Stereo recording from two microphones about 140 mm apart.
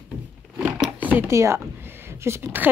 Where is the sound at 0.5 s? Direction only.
5° right (ahead or behind).